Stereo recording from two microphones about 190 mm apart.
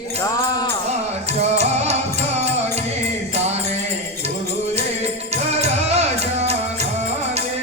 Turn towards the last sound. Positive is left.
turn(degrees=-35)  # may be behind; listen again after turning